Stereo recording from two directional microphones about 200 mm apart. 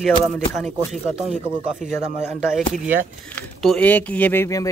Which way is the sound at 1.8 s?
35° right (ahead or behind).